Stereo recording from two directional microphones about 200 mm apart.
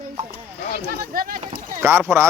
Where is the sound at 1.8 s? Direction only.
10° right (ahead or behind).